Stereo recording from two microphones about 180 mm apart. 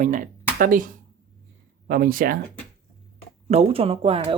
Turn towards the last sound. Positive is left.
turn(degrees=-30)  # may be behind; listen again after turning